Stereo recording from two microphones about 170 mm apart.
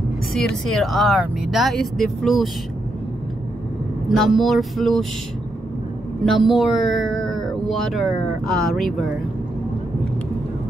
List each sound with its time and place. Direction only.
0.7 s speech: centre (ahead or behind)
4.1 s speech: centre (ahead or behind)
6.2 s speech: centre (ahead or behind)